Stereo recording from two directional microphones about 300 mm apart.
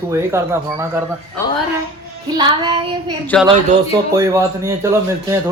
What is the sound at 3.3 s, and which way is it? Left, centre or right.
Speech, centre.